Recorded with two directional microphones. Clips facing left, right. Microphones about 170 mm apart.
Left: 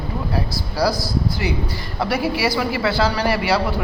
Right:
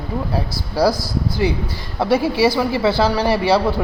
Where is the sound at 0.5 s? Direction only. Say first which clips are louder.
Right 5 dB; 55° right (ahead or behind).